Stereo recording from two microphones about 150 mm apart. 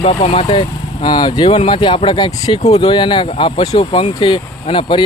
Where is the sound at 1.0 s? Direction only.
30° left (ahead or behind).